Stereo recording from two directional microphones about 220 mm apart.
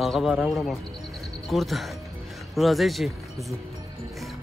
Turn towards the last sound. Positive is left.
turn(degrees=0)  # may be behind; listen again after turning